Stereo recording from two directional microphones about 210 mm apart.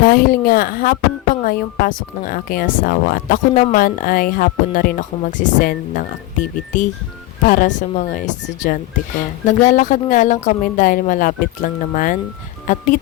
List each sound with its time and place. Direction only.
0.0 s speech: 45° left (ahead or behind)
7.4 s speech: 40° left (ahead or behind)
9.5 s speech: 40° left (ahead or behind)